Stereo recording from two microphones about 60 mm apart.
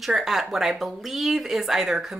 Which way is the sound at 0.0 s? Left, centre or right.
Centre.